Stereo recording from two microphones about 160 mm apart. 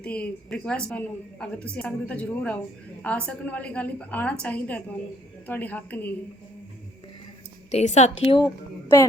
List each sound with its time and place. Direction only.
0.0 s a woman's voice: 5° left (ahead or behind)
7.7 s a woman's voice: 45° left (ahead or behind)